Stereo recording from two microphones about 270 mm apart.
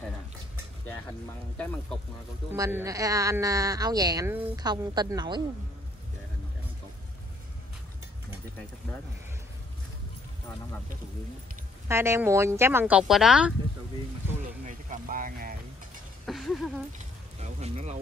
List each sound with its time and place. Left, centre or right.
2.5 s a woman's voice: centre
11.9 s a woman's voice: centre
14.4 s speech: right
16.3 s speech: centre
17.4 s speech: right